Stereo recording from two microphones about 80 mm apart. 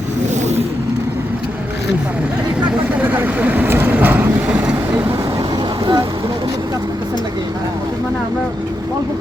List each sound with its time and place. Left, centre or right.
2.9 s vehicle: right
5.4 s vehicle: right